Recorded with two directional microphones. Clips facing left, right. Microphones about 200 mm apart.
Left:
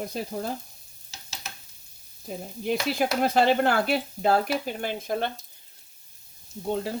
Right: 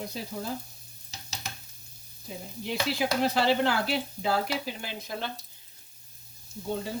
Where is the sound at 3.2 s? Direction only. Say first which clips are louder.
Left 4 dB; 50° left (ahead or behind).